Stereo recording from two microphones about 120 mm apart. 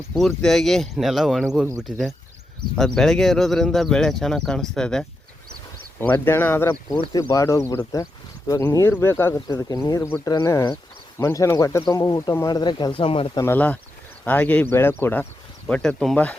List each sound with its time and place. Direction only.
0.1 s speech: centre (ahead or behind)
6.0 s speech: 15° left (ahead or behind); by 8.6 s 35° left (ahead or behind)
8.9 s speech: 20° left (ahead or behind); by 13.3 s 50° left (ahead or behind)
13.3 s speech: 20° left (ahead or behind)
15.7 s speech: 5° left (ahead or behind)